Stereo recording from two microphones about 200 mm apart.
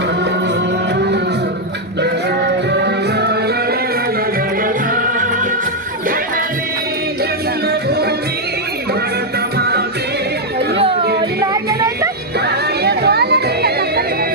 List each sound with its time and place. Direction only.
2.0 s music: 55° right (ahead or behind)
4.6 s music: 45° right (ahead or behind)
7.7 s music: 55° right (ahead or behind)
9.6 s music: 50° right (ahead or behind)
11.5 s a sound: 15° right (ahead or behind)
12.8 s music: 55° right (ahead or behind)